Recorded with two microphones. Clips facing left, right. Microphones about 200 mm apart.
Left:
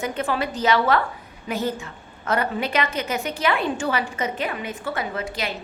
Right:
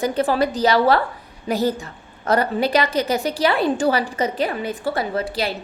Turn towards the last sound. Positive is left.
turn(degrees=-35)  # may be behind; listen again after turning